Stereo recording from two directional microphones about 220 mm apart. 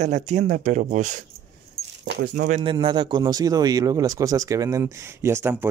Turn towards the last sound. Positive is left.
turn(degrees=-10)  # may be behind; listen again after turning